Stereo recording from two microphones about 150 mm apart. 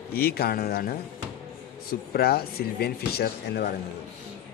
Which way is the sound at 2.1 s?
90° left.